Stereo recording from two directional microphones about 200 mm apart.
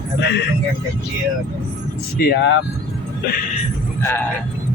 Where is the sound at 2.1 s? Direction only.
60° left (ahead or behind).